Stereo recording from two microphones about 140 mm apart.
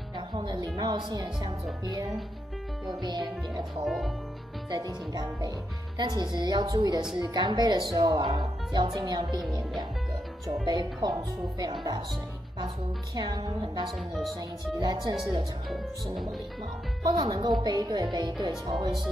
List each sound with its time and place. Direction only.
0.3 s a woman's voice: 30° right (ahead or behind)
3.8 s speech: centre (ahead or behind)
4.6 s a woman's voice: 25° right (ahead or behind)
10.6 s speech: 30° right (ahead or behind)
13.1 s speech: 30° right (ahead or behind)
15.7 s speech: centre (ahead or behind)
17.3 s speech: 30° right (ahead or behind)